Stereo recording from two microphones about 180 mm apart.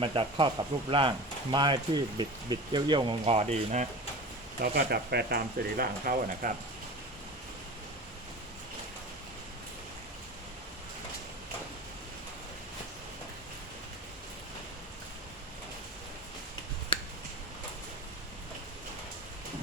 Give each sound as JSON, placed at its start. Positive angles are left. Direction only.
{"t": 0.0, "sound": "speech", "side_deg": -30}
{"t": 4.6, "sound": "speech", "side_deg": -60}